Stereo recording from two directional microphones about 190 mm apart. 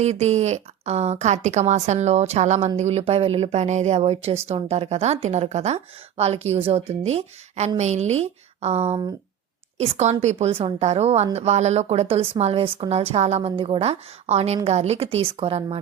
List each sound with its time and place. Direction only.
0.0 s a woman's voice: 35° right (ahead or behind)